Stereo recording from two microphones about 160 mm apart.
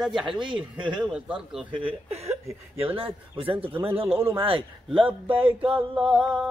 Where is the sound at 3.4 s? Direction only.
35° right (ahead or behind).